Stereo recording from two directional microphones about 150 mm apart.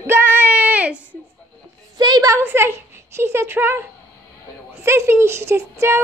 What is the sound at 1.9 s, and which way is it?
A woman's voice, 25° right (ahead or behind).